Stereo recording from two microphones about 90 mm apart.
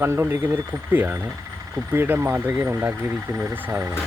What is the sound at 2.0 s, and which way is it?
Speech, 20° right (ahead or behind).